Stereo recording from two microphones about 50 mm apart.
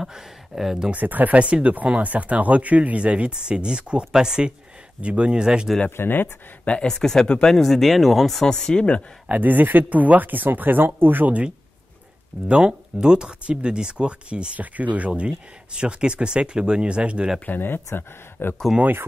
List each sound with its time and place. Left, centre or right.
0.0 s speech: centre
0.9 s speech: right; by 5.7 s centre
5.9 s speech: left
6.6 s speech: left
6.9 s speech: centre
9.3 s speech: right
12.4 s speech: centre
17.5 s speech: left